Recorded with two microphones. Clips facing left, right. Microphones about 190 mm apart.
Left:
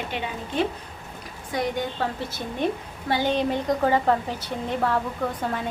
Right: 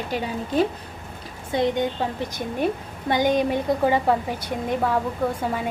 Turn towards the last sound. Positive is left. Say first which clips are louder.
# right 3 dB
turn(degrees=-10)  # may be behind; listen again after turning